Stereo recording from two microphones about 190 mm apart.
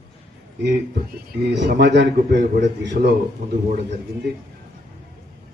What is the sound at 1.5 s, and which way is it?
A man's voice, 65° right (ahead or behind).